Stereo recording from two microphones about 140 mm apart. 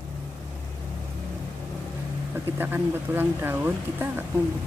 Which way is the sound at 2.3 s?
15° right (ahead or behind).